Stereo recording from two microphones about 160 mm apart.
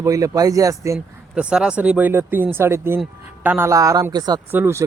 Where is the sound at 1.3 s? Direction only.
5° right (ahead or behind); by 4.4 s 25° right (ahead or behind).